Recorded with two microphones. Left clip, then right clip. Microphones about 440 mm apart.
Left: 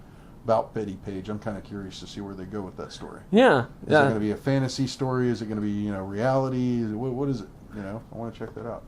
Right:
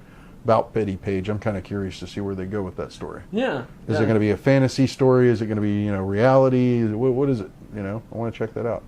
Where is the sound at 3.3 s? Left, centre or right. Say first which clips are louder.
Left 7 dB; left.